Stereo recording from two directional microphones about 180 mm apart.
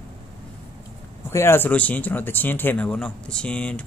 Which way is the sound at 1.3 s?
15° left (ahead or behind).